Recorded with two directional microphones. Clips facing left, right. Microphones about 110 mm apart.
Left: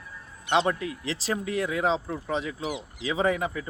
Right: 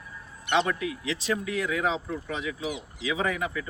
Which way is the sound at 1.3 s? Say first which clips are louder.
Left 1 dB; 30° left (ahead or behind).